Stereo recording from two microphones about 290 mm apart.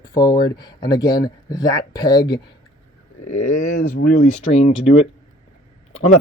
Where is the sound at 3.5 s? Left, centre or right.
Left.